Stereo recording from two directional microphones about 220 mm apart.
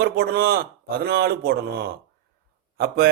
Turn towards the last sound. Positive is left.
turn(degrees=-45)  # may be behind; listen again after turning